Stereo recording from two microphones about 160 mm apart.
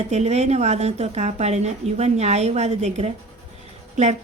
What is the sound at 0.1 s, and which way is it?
A woman's voice, 45° right (ahead or behind).